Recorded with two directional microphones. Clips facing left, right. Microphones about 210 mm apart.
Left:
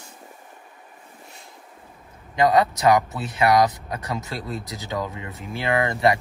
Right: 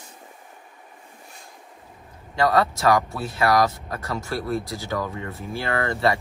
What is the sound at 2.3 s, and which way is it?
Speech, 20° left (ahead or behind).